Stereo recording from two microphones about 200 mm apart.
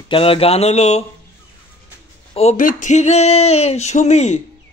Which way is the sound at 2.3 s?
30° left (ahead or behind).